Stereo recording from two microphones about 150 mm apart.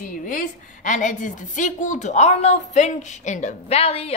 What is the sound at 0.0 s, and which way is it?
A woman's voice, 60° left (ahead or behind).